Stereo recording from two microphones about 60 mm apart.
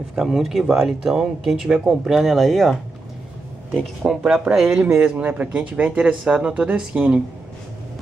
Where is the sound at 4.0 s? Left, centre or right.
Centre.